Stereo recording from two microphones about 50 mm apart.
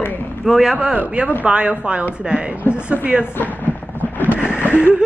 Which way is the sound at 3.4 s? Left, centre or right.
Left.